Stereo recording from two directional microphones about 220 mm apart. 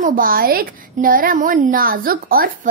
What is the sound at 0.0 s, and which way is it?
Speech, 40° right (ahead or behind).